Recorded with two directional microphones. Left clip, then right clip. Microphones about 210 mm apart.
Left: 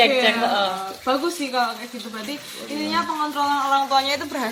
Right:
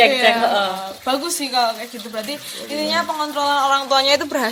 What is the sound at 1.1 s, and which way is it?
Speech, 50° right (ahead or behind).